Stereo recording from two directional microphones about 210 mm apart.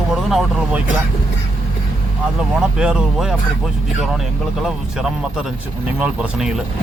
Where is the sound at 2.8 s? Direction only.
5° right (ahead or behind).